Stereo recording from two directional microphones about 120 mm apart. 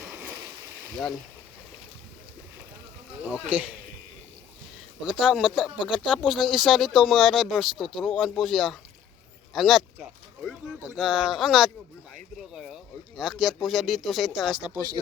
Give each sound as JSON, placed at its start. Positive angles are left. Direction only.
{"t": 0.0, "sound": "a sound", "side_deg": -15}
{"t": 0.9, "sound": "speech", "side_deg": 0}
{"t": 3.3, "sound": "speech", "side_deg": -10}
{"t": 5.2, "sound": "speech", "side_deg": -5}